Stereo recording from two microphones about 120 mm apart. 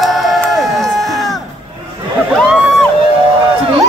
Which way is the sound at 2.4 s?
5° right (ahead or behind).